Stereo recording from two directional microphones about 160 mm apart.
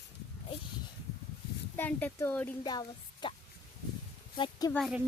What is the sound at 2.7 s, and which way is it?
Speech, 25° left (ahead or behind).